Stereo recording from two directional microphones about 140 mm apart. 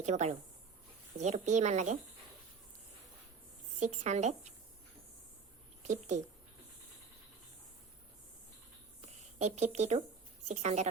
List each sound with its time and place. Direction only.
0.0 s speech: 55° right (ahead or behind)
3.8 s speech: 55° right (ahead or behind)
5.9 s speech: 60° right (ahead or behind)
9.0 s a sound: 55° right (ahead or behind)
10.5 s a woman's voice: 55° right (ahead or behind)